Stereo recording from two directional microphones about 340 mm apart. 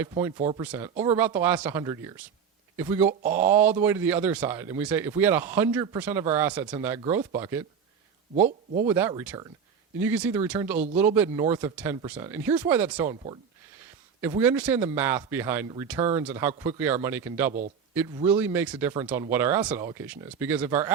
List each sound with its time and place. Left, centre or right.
0.0 s speech: centre
0.6 s speech: centre
8.4 s speech: right
8.9 s speech: centre